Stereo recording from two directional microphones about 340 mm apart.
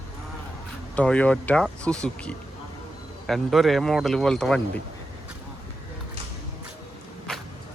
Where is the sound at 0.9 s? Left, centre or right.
Centre.